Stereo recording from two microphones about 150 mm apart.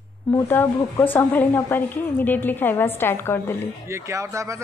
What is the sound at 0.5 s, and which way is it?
A woman's voice, 15° left (ahead or behind).